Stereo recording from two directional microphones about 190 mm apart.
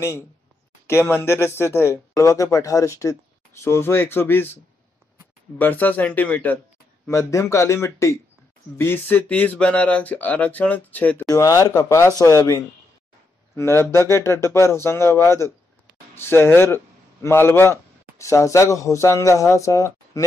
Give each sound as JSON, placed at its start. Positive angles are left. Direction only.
{"t": 0.8, "sound": "speech", "side_deg": 10}
{"t": 5.6, "sound": "speech", "side_deg": 10}